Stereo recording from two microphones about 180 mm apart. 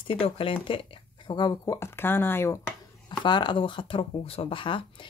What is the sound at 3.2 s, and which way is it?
Speech, 25° left (ahead or behind).